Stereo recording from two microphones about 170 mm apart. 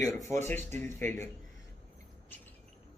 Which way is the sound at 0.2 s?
15° left (ahead or behind).